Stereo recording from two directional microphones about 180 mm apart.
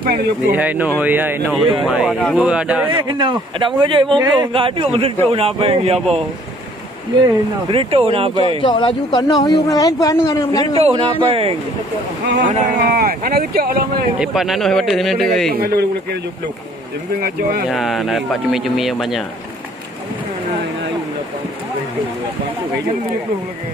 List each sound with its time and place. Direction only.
0.0 s speech: 55° right (ahead or behind)
0.6 s speech: 10° right (ahead or behind)
2.9 s speech: 25° right (ahead or behind)
7.7 s speech: 35° right (ahead or behind)
8.5 s speech: 25° left (ahead or behind)
10.9 s speech: 30° right (ahead or behind)
12.4 s speech: 40° right (ahead or behind)
12.9 s speech: 55° right (ahead or behind)
14.2 s speech: centre (ahead or behind)
15.5 s speech: 60° right (ahead or behind)
17.2 s speech: 55° right (ahead or behind)
17.6 s speech: centre (ahead or behind)